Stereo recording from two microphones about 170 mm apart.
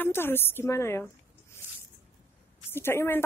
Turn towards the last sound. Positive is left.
turn(degrees=15)  # may be behind; listen again after turning